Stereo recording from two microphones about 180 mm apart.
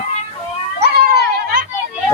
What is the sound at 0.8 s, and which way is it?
Children playing, 60° right (ahead or behind).